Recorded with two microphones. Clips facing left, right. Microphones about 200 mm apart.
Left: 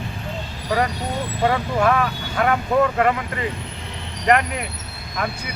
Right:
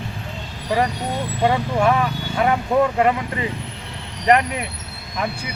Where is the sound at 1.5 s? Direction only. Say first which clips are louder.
Right 1 dB; 15° right (ahead or behind).